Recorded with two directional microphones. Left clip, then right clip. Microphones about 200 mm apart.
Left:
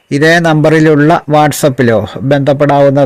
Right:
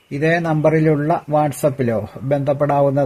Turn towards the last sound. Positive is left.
turn(degrees=40)  # may be behind; listen again after turning